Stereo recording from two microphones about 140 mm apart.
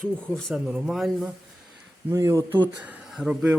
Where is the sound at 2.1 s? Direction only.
20° right (ahead or behind).